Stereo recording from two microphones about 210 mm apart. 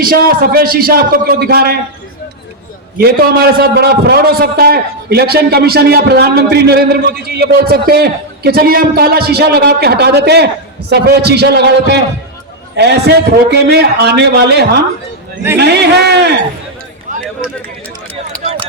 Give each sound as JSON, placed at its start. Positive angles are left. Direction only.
{"t": 0.0, "sound": "a man's voice", "side_deg": -45}
{"t": 3.0, "sound": "a man's voice", "side_deg": -45}
{"t": 18.4, "sound": "a sound", "side_deg": -30}